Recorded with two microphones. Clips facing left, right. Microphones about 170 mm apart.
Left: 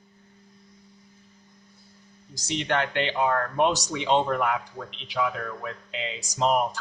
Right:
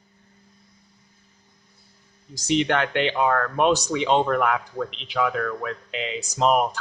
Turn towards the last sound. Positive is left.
turn(degrees=-65)  # may be behind; listen again after turning